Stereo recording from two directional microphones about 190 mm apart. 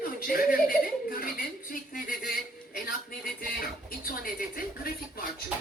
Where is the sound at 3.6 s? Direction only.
50° left (ahead or behind).